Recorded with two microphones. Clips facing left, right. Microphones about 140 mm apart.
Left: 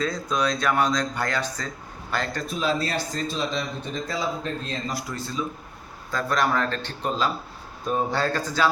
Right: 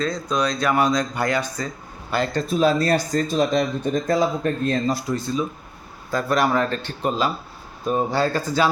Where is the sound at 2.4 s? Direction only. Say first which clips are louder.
Right 8 dB; 35° right (ahead or behind); by 4.8 s 55° right (ahead or behind).